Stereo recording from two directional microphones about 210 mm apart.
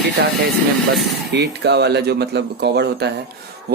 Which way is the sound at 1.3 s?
55° right (ahead or behind).